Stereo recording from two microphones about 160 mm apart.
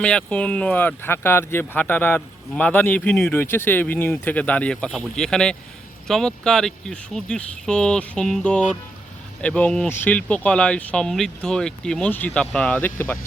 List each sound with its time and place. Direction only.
0.0 s speech: 5° left (ahead or behind)